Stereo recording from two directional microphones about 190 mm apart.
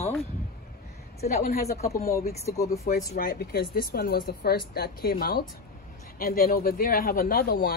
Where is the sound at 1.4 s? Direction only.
50° left (ahead or behind).